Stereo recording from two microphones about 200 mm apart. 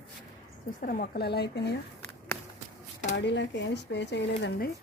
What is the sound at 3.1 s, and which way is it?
Speech, 60° left (ahead or behind).